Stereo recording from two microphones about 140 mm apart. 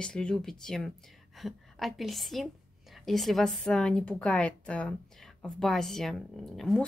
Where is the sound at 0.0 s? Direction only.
5° left (ahead or behind).